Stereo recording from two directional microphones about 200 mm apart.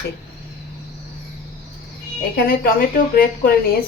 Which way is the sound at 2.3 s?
50° left (ahead or behind).